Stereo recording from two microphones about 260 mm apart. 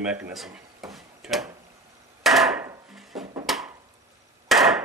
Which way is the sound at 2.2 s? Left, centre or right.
Centre.